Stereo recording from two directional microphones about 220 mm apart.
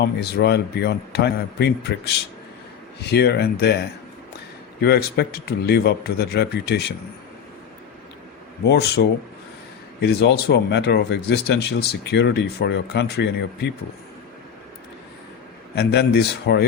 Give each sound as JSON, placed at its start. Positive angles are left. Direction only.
{"t": 0.0, "sound": "speech", "side_deg": 45}
{"t": 4.8, "sound": "speech", "side_deg": 45}
{"t": 8.6, "sound": "speech", "side_deg": 45}
{"t": 15.7, "sound": "speech", "side_deg": 50}